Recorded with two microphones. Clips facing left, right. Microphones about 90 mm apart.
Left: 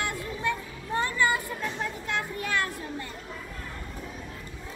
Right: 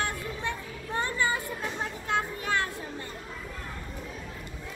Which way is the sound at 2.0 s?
25° right (ahead or behind).